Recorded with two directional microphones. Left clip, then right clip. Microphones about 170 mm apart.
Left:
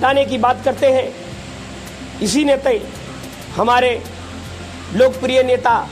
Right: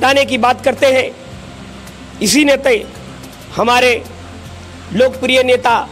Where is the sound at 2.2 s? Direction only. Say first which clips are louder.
Right 4 dB; 25° right (ahead or behind).